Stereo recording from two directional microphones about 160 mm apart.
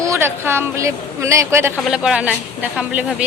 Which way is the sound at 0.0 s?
15° right (ahead or behind).